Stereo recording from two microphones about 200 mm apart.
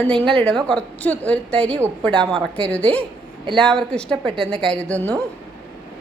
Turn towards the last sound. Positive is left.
turn(degrees=5)  # may be behind; listen again after turning